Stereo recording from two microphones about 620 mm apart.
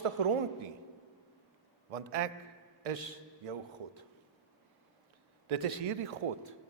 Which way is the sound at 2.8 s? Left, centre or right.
Right.